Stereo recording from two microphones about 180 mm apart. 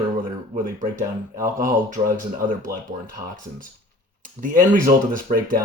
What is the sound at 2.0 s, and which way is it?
Speech, 30° right (ahead or behind).